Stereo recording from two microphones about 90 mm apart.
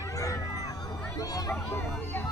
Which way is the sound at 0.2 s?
40° left (ahead or behind).